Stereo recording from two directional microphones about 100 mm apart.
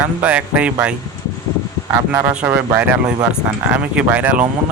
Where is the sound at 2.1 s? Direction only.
15° right (ahead or behind).